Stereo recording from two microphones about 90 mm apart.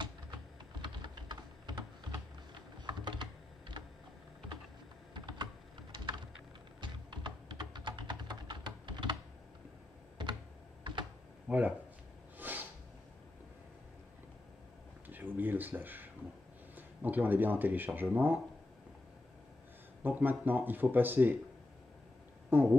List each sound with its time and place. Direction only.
0.8 s typing: 55° right (ahead or behind)
5.1 s typing: 55° right (ahead or behind)
11.4 s speech: 15° right (ahead or behind)
12.4 s a sound: 20° right (ahead or behind)
15.0 s a sound: 20° right (ahead or behind)
16.7 s speech: 20° right (ahead or behind)
20.0 s speech: 20° right (ahead or behind)
22.5 s speech: 20° right (ahead or behind)